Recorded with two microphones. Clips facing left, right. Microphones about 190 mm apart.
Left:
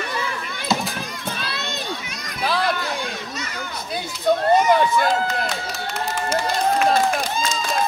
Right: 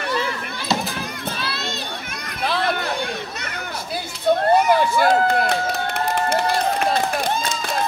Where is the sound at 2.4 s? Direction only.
Centre (ahead or behind).